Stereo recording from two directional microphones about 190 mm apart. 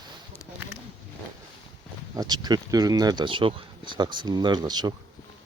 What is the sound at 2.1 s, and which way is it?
Speech, 20° right (ahead or behind).